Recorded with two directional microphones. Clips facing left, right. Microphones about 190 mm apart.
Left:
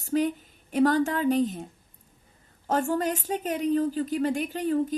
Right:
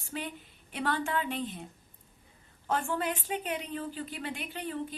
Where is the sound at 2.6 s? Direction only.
40° left (ahead or behind).